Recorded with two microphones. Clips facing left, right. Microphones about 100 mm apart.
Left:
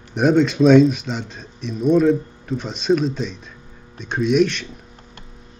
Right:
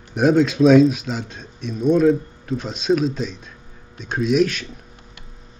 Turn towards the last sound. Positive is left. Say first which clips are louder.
# left 1 dB
turn(degrees=0)  # may be behind; listen again after turning